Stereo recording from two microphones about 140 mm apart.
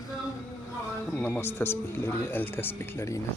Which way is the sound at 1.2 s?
15° left (ahead or behind).